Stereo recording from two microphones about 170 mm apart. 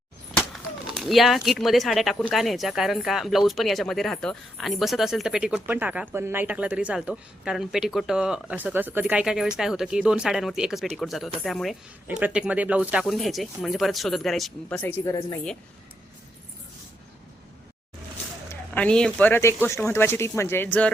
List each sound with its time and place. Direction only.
0.9 s speech: centre (ahead or behind)
14.8 s speech: 15° left (ahead or behind)
18.7 s speech: 5° left (ahead or behind)